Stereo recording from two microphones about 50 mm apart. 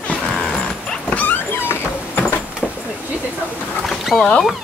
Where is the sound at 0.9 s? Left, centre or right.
Left.